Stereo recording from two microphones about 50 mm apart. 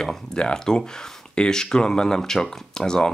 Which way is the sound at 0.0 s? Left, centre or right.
Centre.